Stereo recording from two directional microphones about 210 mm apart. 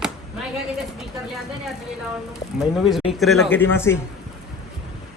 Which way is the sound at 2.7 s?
Centre (ahead or behind).